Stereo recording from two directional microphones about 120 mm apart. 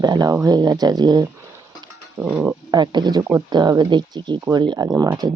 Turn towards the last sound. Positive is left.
turn(degrees=-30)  # may be behind; listen again after turning